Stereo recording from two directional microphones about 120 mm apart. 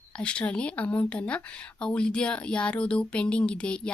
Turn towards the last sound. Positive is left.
turn(degrees=10)  # may be behind; listen again after turning